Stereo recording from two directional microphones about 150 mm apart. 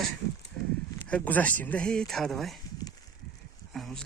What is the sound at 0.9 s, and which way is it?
Speech, 10° left (ahead or behind).